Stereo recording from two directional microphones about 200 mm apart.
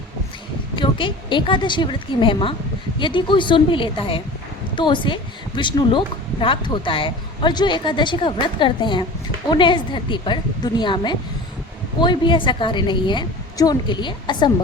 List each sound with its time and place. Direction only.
0.8 s a woman's voice: 25° left (ahead or behind)